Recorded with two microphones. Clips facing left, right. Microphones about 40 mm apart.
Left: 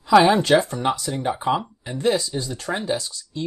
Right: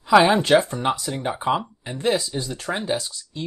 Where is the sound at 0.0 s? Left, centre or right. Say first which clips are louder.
Left 1 dB; centre.